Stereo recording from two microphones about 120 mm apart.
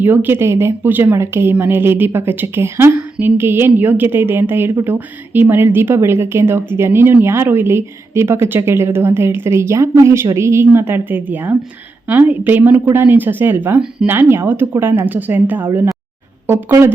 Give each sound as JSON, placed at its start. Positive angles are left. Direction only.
{"t": 0.0, "sound": "a woman's voice", "side_deg": -15}